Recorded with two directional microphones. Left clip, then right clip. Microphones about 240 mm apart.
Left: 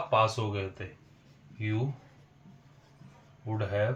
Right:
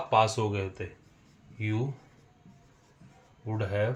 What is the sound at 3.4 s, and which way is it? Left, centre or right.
Speech, right.